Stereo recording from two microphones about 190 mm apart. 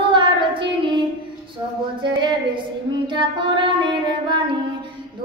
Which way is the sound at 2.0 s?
25° right (ahead or behind).